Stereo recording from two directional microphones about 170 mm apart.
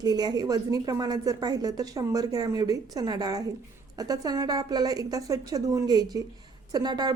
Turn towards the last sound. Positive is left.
turn(degrees=-25)  # may be behind; listen again after turning